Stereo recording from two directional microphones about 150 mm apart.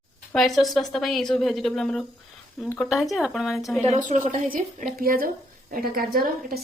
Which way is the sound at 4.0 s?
55° right (ahead or behind).